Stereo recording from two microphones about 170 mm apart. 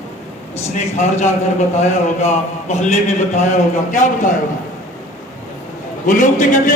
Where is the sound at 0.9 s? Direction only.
45° left (ahead or behind).